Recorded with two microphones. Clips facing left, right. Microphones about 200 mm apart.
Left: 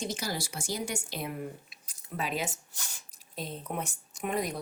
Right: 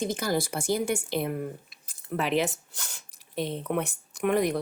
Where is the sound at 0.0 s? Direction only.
55° right (ahead or behind).